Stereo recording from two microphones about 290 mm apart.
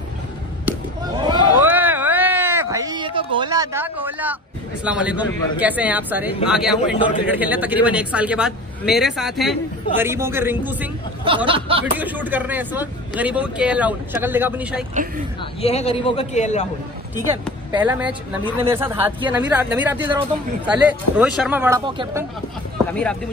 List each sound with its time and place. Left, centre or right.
0.7 s a sound: centre
4.8 s speech: centre
11.2 s speech: centre
11.8 s speech: centre
15.6 s a man's voice: left
17.6 s speech: centre